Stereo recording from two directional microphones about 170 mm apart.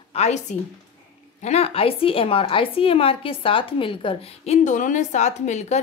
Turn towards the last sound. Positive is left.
turn(degrees=40)  # may be behind; listen again after turning